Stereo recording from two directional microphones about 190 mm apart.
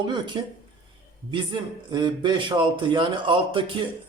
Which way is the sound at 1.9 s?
25° right (ahead or behind).